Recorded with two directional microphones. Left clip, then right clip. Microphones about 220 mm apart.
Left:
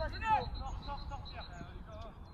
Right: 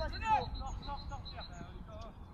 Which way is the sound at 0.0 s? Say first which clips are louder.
Even; 20° right (ahead or behind).